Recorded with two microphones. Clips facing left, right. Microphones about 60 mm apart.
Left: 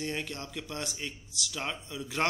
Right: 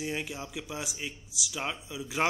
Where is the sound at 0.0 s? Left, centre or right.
Centre.